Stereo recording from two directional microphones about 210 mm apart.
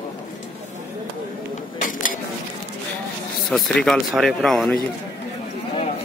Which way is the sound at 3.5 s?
5° left (ahead or behind).